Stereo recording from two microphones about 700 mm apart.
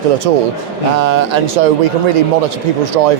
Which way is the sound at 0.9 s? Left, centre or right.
Right.